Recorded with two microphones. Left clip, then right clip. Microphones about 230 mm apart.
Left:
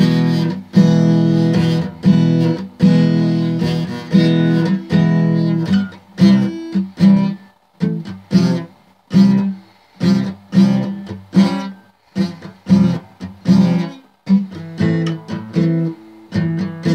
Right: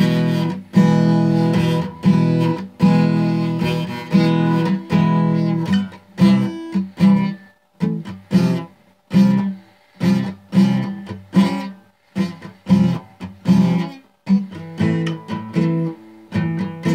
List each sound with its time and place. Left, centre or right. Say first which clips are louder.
0.0 s music: left 2 dB; centre